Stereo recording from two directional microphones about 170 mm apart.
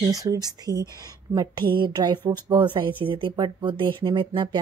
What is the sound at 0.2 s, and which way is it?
Speech, 20° right (ahead or behind).